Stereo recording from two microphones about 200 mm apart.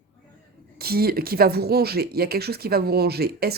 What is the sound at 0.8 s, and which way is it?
A man's voice, 50° right (ahead or behind).